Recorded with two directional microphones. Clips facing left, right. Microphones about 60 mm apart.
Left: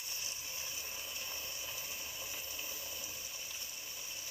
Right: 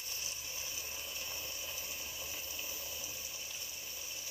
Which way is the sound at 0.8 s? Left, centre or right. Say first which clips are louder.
Even; centre.